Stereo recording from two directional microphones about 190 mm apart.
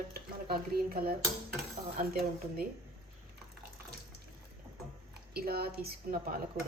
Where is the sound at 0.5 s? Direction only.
50° right (ahead or behind).